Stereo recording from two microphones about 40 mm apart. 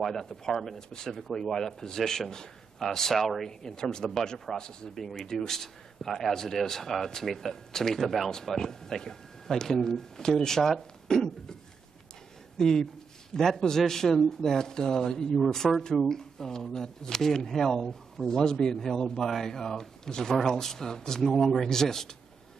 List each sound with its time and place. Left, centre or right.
0.0 s speech: centre
3.4 s speech: centre
12.5 s speech: centre